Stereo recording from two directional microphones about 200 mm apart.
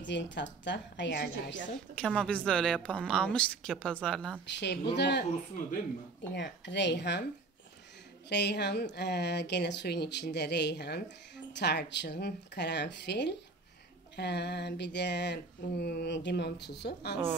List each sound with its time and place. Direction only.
0.0 s speech: 65° left (ahead or behind)
2.0 s a woman's voice: 5° left (ahead or behind)
4.9 s speech: 60° left (ahead or behind)
6.3 s speech: 60° left (ahead or behind)
8.3 s speech: 60° left (ahead or behind)